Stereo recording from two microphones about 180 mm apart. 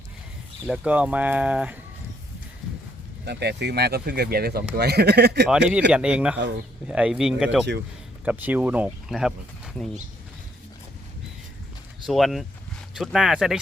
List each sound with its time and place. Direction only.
0.7 s speech: 5° right (ahead or behind)
3.2 s speech: 65° right (ahead or behind)
5.5 s speech: 5° right (ahead or behind)
12.0 s speech: centre (ahead or behind)